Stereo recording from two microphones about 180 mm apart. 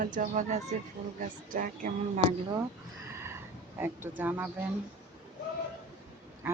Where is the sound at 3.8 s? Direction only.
10° right (ahead or behind).